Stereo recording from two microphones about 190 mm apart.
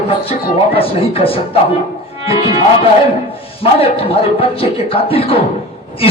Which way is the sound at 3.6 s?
30° left (ahead or behind).